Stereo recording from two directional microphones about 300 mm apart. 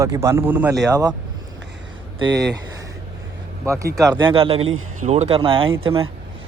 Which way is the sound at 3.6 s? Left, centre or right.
Centre.